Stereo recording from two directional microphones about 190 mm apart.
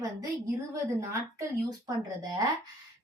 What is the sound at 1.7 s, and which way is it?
Speech, 20° right (ahead or behind).